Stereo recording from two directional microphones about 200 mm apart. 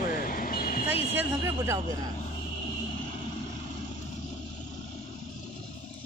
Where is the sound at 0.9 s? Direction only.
30° left (ahead or behind).